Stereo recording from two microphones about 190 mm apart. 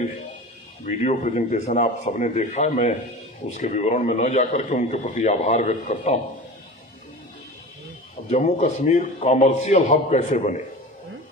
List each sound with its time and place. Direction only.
0.8 s a man's voice: 40° left (ahead or behind)
8.3 s a man's voice: 35° left (ahead or behind)